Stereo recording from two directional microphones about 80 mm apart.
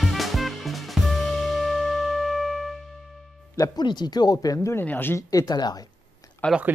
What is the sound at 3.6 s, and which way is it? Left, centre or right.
Speech, left.